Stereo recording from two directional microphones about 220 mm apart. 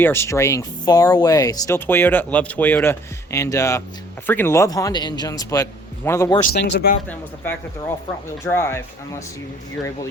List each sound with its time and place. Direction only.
0.0 s speech: 10° left (ahead or behind)
6.5 s speech: 50° left (ahead or behind)
7.1 s speech: 5° left (ahead or behind)